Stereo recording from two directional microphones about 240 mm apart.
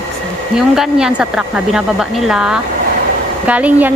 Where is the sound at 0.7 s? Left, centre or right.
Centre.